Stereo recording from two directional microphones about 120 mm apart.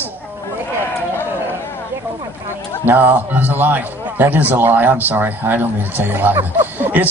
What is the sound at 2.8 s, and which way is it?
A man's voice, 15° right (ahead or behind).